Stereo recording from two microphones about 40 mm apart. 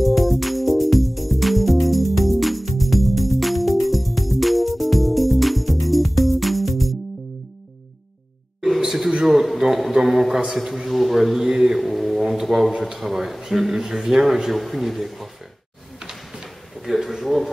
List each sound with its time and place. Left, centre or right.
0.0 s music: centre
8.5 s a sound: centre
10.5 s a man's voice: centre
11.8 s music: centre
12.3 s speech: centre
16.0 s a sound: centre
16.7 s speech: centre